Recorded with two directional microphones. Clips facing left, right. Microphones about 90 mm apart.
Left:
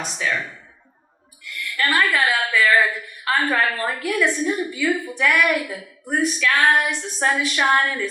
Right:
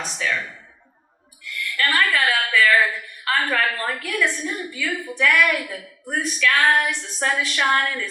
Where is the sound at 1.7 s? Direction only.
20° left (ahead or behind).